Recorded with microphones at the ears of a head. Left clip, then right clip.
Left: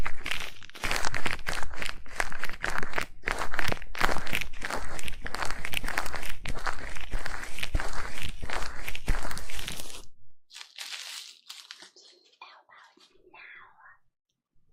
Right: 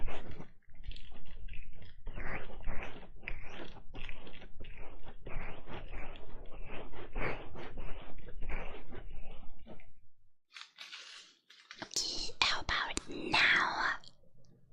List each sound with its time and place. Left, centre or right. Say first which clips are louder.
0.0 s a sound: left 14 dB; left
10.5 s crushing: left 8 dB; left
11.9 s whispering: right 18 dB; right